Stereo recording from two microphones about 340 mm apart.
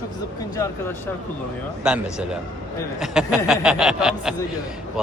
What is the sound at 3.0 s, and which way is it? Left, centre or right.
Speech, centre.